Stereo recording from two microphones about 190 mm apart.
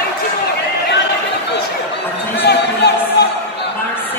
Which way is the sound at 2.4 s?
60° left (ahead or behind).